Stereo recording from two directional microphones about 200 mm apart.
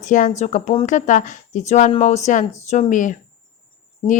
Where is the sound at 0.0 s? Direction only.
40° left (ahead or behind).